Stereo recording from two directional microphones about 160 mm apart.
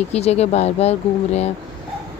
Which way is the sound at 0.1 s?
40° left (ahead or behind).